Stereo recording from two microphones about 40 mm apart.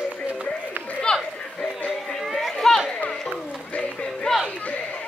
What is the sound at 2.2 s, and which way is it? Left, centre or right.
Chatter, centre.